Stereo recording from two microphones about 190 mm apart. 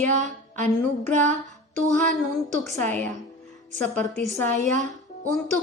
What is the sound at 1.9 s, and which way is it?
Speech, 5° left (ahead or behind).